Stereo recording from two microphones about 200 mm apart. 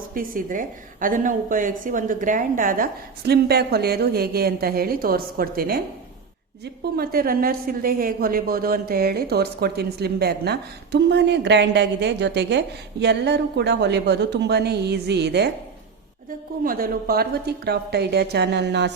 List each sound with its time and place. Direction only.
0.1 s a woman's voice: 45° right (ahead or behind)
6.9 s a woman's voice: 50° right (ahead or behind)
16.6 s a woman's voice: 45° right (ahead or behind)